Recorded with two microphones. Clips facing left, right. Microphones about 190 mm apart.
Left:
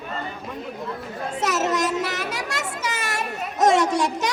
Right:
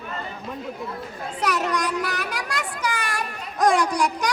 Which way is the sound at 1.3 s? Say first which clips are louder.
Left 1 dB; 25° left (ahead or behind).